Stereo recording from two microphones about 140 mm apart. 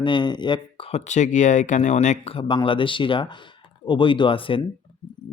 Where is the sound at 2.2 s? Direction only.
40° left (ahead or behind).